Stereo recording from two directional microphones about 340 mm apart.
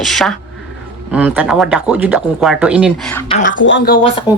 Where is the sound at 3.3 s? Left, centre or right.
Left.